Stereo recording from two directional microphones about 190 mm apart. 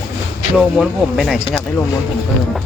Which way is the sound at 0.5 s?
Centre (ahead or behind).